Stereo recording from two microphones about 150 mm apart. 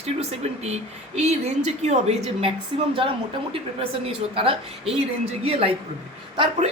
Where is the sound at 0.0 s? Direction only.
45° right (ahead or behind).